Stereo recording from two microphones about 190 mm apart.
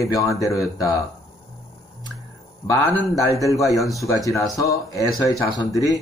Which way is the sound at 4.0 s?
15° left (ahead or behind).